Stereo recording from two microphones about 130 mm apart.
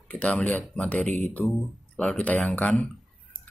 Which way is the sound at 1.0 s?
65° right (ahead or behind).